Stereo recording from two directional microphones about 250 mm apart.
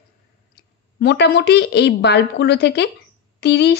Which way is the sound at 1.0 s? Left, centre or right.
Left.